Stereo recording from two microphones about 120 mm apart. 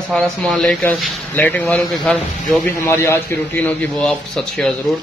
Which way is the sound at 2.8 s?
20° left (ahead or behind).